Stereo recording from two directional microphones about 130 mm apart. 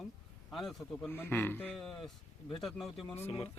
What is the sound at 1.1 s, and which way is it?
Speech, 15° left (ahead or behind).